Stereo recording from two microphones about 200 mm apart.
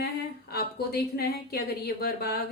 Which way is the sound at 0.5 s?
50° left (ahead or behind).